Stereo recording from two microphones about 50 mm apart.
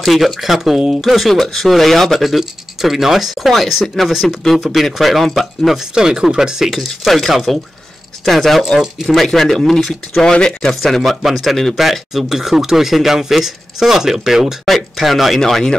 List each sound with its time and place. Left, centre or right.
0.0 s speech: centre
4.1 s speech: centre
5.9 s speech: centre
10.2 s speech: centre